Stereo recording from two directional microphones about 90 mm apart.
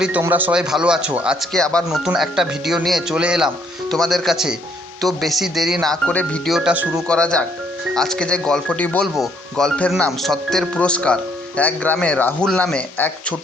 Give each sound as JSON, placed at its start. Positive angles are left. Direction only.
{"t": 0.2, "sound": "speech", "side_deg": -20}
{"t": 0.5, "sound": "speech", "side_deg": -10}
{"t": 1.5, "sound": "speech", "side_deg": 10}
{"t": 1.9, "sound": "speech", "side_deg": -5}
{"t": 3.8, "sound": "speech", "side_deg": 5}
{"t": 6.1, "sound": "speech", "side_deg": 15}
{"t": 6.5, "sound": "speech", "side_deg": -5}
{"t": 7.1, "sound": "speech", "side_deg": 10}
{"t": 9.1, "sound": "speech", "side_deg": 0}